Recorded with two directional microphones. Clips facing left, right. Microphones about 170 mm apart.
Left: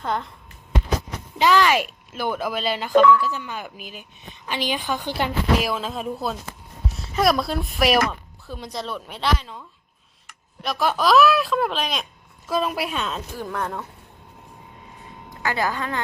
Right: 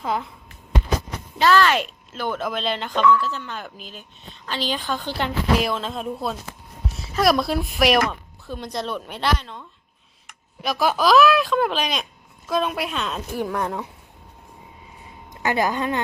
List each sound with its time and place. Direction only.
0.0 s speech: 5° right (ahead or behind)
1.4 s speech: 15° left (ahead or behind)
13.3 s speech: 10° right (ahead or behind)
15.3 s a woman's voice: 20° right (ahead or behind)